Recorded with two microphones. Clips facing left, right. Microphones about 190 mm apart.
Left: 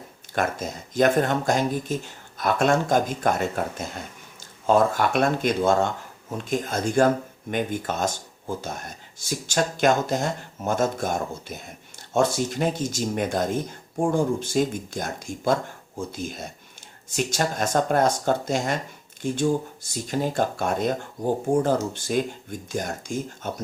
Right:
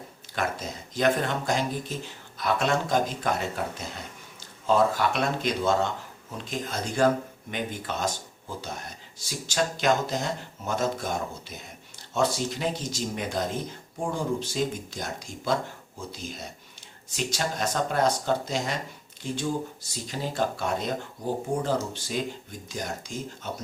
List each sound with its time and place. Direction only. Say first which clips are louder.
0.3 s speech: left 4 dB; 50° left (ahead or behind)